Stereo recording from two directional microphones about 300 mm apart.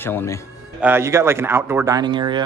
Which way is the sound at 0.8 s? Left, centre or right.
Centre.